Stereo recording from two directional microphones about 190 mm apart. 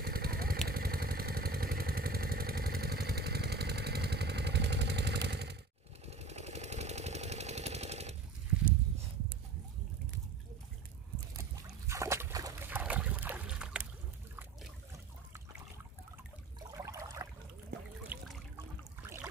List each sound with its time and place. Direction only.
0.0 s motorcycle: 55° right (ahead or behind)
0.7 s vehicle: 50° right (ahead or behind)
6.0 s engine: 35° right (ahead or behind)
11.9 s boat: 15° right (ahead or behind)
16.5 s a sound: 20° right (ahead or behind)
18.0 s trickle: 5° right (ahead or behind)